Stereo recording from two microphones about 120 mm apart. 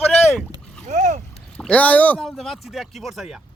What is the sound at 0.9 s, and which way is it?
Boat, 90° right.